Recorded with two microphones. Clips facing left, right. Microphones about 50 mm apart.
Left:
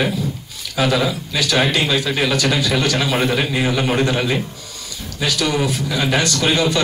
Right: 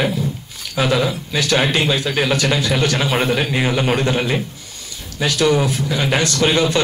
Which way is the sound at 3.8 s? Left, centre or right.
Right.